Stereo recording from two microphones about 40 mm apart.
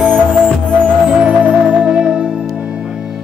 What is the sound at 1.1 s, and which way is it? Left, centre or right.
Music, right.